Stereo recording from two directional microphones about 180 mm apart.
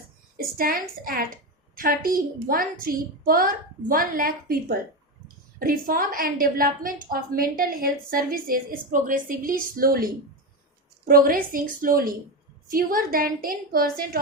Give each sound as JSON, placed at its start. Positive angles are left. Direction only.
{"t": 0.3, "sound": "a woman's voice", "side_deg": -50}
{"t": 11.1, "sound": "a woman's voice", "side_deg": -50}